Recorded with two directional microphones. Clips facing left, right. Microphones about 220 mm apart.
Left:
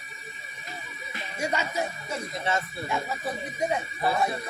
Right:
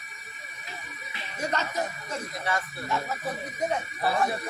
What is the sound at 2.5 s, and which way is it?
Speech, 25° left (ahead or behind).